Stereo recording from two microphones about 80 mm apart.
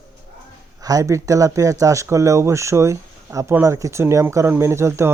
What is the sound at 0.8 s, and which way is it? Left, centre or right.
Speech, right.